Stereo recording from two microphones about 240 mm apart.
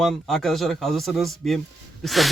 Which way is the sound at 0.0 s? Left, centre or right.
Centre.